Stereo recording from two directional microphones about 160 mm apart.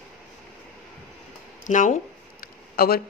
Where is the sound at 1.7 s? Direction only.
50° left (ahead or behind).